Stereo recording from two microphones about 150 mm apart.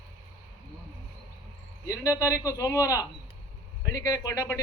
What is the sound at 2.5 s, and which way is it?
A man's voice, 20° left (ahead or behind).